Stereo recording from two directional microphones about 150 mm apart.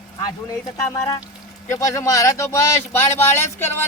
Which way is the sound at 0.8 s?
20° left (ahead or behind).